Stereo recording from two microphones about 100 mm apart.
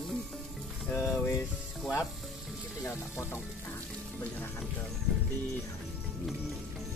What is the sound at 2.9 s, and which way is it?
Speech, 25° left (ahead or behind).